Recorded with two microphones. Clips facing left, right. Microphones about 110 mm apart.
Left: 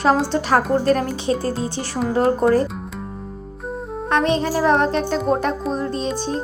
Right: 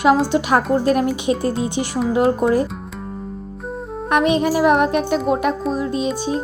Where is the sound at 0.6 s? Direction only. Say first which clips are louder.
Right 1 dB; 10° right (ahead or behind).